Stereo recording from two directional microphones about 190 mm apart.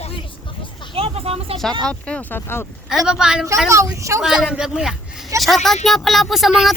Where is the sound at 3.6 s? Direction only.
15° right (ahead or behind).